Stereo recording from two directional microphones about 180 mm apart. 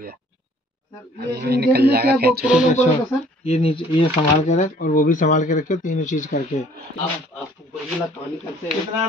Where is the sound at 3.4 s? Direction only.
35° left (ahead or behind).